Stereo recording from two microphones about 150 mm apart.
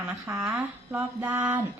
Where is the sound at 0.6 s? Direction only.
10° right (ahead or behind).